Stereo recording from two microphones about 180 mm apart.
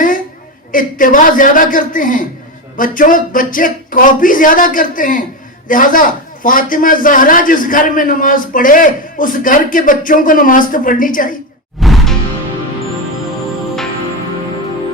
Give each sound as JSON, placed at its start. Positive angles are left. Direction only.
{"t": 0.7, "sound": "a man's voice", "side_deg": 50}
{"t": 11.8, "sound": "music", "side_deg": 0}